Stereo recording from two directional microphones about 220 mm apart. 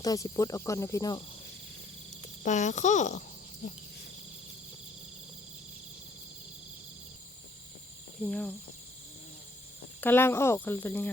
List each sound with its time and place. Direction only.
0.0 s speech: 15° left (ahead or behind)
2.4 s a child's voice: 35° left (ahead or behind)
8.2 s speech: 5° left (ahead or behind)
10.0 s speech: 10° left (ahead or behind)